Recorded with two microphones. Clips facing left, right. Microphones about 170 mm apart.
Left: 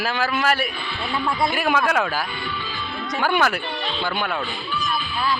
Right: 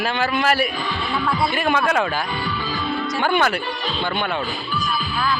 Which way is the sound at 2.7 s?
45° right (ahead or behind).